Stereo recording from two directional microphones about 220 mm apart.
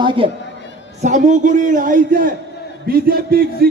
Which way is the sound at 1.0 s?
35° right (ahead or behind).